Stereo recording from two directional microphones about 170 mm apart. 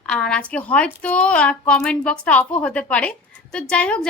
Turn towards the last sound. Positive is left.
turn(degrees=5)  # may be behind; listen again after turning